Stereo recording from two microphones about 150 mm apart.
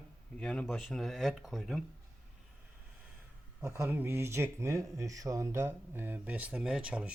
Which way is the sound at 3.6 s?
15° right (ahead or behind).